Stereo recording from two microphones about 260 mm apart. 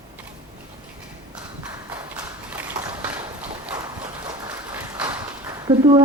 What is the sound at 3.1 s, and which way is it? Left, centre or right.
Clip-clop, centre.